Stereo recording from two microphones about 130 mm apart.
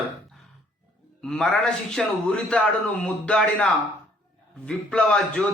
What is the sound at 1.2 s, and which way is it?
A man's voice, 5° left (ahead or behind).